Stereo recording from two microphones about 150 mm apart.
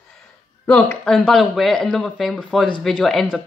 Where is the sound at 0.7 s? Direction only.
10° left (ahead or behind).